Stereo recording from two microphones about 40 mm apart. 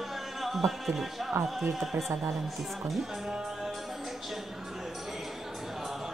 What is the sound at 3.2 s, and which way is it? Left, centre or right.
Music, centre.